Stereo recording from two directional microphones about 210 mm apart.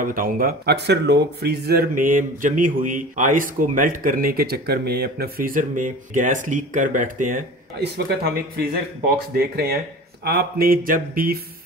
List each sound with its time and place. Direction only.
0.0 s speech: 40° right (ahead or behind)
7.8 s speech: 50° right (ahead or behind)